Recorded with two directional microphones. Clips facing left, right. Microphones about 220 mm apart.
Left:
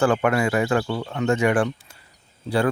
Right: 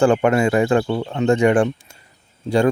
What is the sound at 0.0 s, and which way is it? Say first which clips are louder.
Speech: right 4 dB; 30° right (ahead or behind).